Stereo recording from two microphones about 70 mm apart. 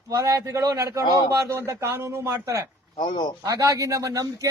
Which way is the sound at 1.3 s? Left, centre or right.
Right.